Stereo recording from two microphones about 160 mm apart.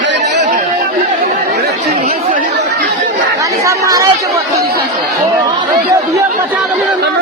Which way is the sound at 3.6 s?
25° right (ahead or behind).